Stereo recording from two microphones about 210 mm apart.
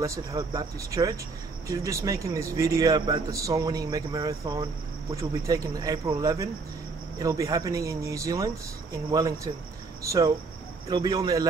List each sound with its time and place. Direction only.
0.0 s a man's voice: 15° right (ahead or behind)